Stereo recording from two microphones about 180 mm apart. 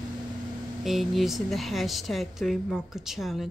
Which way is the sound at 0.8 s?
Centre (ahead or behind).